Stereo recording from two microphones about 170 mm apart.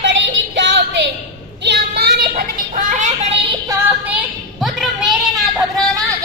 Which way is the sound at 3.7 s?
10° right (ahead or behind).